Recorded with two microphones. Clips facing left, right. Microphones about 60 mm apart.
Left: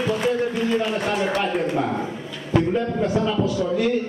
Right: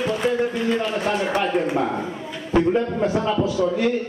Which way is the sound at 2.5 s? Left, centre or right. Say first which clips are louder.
Right 2 dB; centre.